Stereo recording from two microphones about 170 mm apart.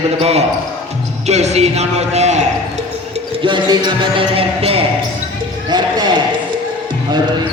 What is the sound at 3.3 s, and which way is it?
A man's voice, 30° right (ahead or behind).